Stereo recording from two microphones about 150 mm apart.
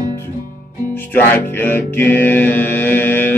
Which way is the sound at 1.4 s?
15° left (ahead or behind).